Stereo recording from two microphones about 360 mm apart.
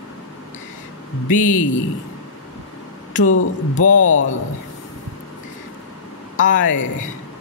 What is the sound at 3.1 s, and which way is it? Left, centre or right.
Speech, left.